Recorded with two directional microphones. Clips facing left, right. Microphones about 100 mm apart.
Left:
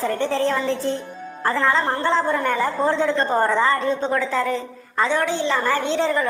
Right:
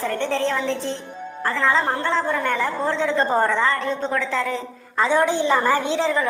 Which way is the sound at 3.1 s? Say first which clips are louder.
Even; 10° right (ahead or behind).